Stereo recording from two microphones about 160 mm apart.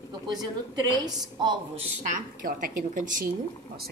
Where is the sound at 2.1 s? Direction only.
55° right (ahead or behind).